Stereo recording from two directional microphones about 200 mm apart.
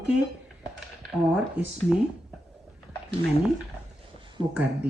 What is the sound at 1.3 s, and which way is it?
Speech, 5° right (ahead or behind).